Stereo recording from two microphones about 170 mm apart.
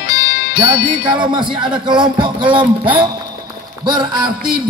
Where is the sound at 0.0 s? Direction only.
70° left (ahead or behind).